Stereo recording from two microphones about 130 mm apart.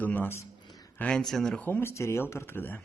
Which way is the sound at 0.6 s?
30° left (ahead or behind).